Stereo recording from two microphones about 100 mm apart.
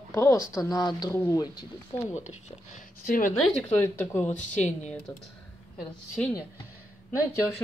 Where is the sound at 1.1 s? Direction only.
25° left (ahead or behind).